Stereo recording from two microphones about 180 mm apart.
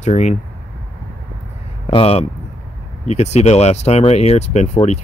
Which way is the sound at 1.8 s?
30° left (ahead or behind).